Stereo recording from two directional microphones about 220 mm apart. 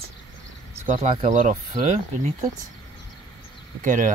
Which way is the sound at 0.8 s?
30° right (ahead or behind).